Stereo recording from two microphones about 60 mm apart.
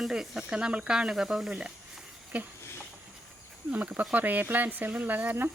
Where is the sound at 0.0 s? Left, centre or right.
Centre.